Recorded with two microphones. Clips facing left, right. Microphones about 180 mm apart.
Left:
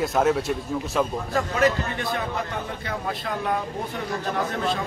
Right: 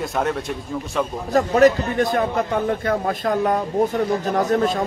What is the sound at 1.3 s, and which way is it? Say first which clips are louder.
Speech: right 8 dB; 45° right (ahead or behind).